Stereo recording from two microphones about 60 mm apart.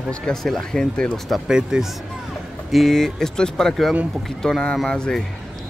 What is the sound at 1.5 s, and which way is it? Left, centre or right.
Speech, centre.